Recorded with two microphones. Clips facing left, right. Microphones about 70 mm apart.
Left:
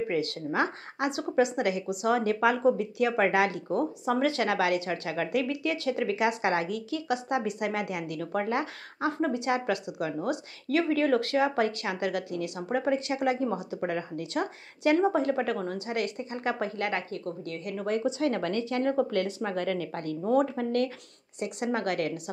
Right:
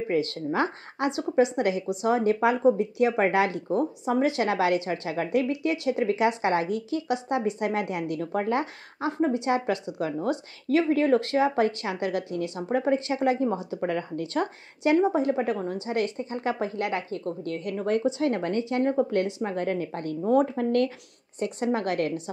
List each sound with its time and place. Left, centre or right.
0.1 s a woman's voice: right
15.1 s a woman's voice: right
20.2 s a woman's voice: right